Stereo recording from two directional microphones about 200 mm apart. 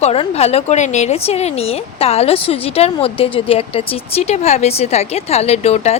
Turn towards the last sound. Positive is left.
turn(degrees=30)  # may be behind; listen again after turning